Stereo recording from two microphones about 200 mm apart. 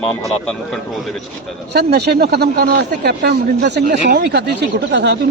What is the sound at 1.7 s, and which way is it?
A man's voice, 55° right (ahead or behind).